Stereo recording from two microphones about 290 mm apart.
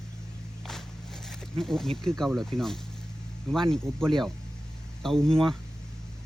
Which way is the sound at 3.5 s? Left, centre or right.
Centre.